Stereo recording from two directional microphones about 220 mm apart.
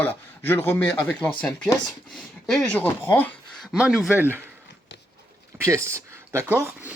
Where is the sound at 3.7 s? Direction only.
5° right (ahead or behind).